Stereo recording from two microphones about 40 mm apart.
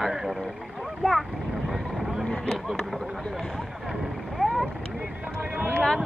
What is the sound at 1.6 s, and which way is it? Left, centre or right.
Vehicle, centre.